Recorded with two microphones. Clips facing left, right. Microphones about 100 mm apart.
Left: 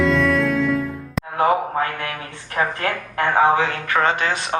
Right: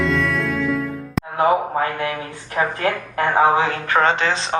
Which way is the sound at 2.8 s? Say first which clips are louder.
Right 2 dB; 25° right (ahead or behind).